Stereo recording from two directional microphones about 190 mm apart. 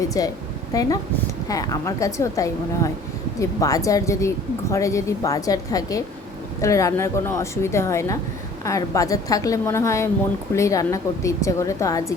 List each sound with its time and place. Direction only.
0.0 s a woman's voice: 20° left (ahead or behind)